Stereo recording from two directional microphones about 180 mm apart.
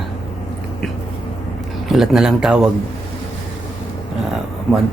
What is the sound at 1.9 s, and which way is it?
Speech, centre (ahead or behind).